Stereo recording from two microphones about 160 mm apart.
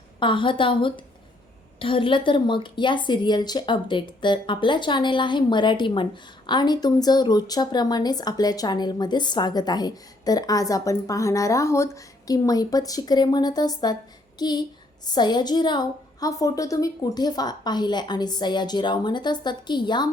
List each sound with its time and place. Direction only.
0.2 s a woman's voice: 30° left (ahead or behind)